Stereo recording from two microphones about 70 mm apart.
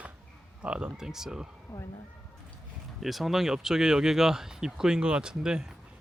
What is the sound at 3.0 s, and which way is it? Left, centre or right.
Speech, centre.